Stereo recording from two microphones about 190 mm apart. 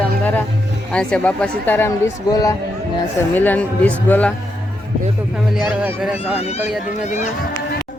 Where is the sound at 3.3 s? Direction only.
10° left (ahead or behind).